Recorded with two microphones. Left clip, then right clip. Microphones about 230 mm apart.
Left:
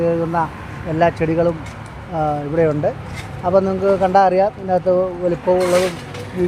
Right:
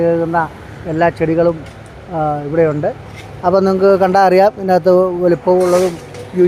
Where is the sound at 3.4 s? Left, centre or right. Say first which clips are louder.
Right 4 dB; right.